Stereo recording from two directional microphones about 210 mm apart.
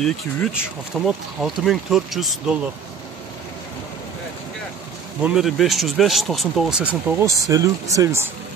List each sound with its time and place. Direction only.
0.0 s speech: centre (ahead or behind)
5.2 s speech: centre (ahead or behind)